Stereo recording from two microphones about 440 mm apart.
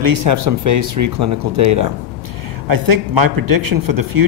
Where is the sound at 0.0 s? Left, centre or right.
Right.